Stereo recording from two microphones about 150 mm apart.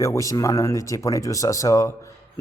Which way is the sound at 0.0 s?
20° left (ahead or behind).